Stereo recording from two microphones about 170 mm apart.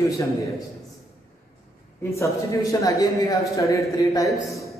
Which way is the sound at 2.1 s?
15° left (ahead or behind).